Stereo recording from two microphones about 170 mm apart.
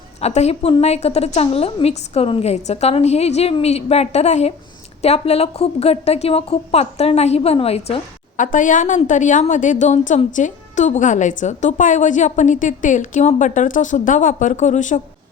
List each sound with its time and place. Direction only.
0.2 s a woman's voice: 40° left (ahead or behind)
8.4 s a woman's voice: 50° left (ahead or behind)